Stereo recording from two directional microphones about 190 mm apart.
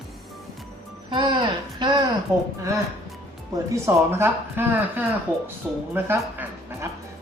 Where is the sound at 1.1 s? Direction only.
25° right (ahead or behind).